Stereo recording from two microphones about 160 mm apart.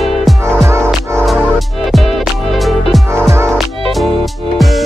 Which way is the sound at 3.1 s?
15° right (ahead or behind).